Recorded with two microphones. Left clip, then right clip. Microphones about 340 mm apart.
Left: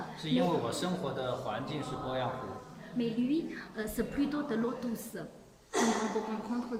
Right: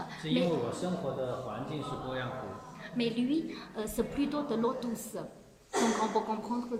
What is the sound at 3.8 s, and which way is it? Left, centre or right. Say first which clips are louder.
Speech: right 1 dB; centre.